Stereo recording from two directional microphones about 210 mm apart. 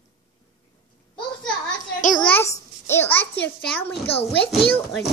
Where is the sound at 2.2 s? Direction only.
10° left (ahead or behind).